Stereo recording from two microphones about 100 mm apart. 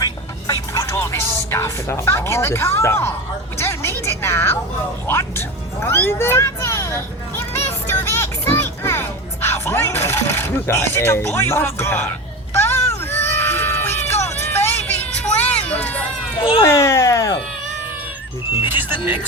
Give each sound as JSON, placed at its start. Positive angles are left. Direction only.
{"t": 0.0, "sound": "music", "side_deg": 40}
{"t": 3.6, "sound": "a woman's voice", "side_deg": 25}
{"t": 5.0, "sound": "music", "side_deg": 25}
{"t": 12.5, "sound": "a sound", "side_deg": 25}
{"t": 16.4, "sound": "speech", "side_deg": 65}
{"t": 16.6, "sound": "a sound", "side_deg": 30}
{"t": 18.7, "sound": "music", "side_deg": -20}